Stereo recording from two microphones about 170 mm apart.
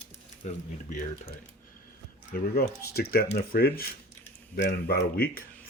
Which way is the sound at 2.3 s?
65° left (ahead or behind).